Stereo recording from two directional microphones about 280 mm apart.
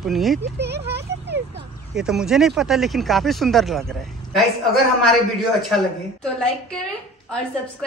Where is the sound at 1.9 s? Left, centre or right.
Centre.